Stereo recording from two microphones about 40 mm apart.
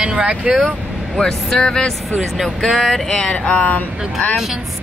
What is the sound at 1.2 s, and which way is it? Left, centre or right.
Speech, centre.